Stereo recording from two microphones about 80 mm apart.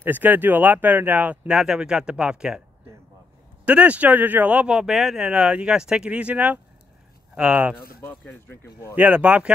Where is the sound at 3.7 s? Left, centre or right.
Centre.